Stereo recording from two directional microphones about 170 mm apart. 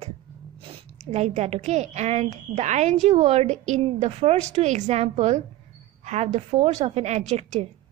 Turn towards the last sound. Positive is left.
turn(degrees=-40)  # may be behind; listen again after turning